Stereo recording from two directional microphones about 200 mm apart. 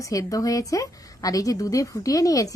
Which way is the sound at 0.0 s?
15° left (ahead or behind).